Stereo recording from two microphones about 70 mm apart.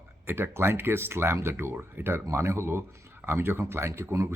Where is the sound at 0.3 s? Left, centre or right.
Right.